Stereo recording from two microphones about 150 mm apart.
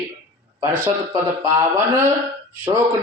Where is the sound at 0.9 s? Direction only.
15° right (ahead or behind).